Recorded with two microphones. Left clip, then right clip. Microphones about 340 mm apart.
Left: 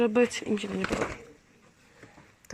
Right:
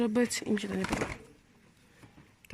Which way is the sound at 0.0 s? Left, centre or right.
Centre.